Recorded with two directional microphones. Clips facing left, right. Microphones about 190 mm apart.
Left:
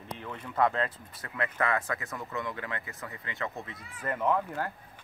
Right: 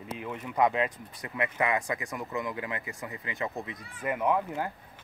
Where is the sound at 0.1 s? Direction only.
5° right (ahead or behind).